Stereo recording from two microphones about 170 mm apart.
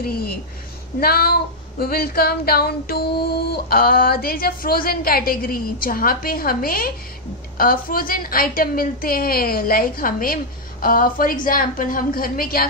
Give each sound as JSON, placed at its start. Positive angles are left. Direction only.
{"t": 0.0, "sound": "female singing", "side_deg": 65}